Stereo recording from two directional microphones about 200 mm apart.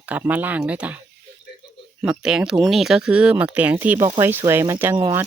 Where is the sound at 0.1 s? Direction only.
10° right (ahead or behind).